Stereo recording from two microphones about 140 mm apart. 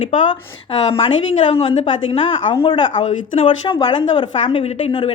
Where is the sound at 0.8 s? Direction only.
45° left (ahead or behind).